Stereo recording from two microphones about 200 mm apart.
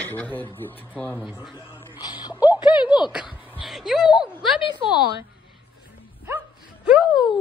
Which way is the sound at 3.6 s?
Centre (ahead or behind).